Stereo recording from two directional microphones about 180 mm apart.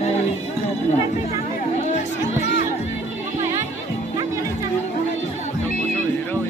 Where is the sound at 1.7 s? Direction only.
40° left (ahead or behind).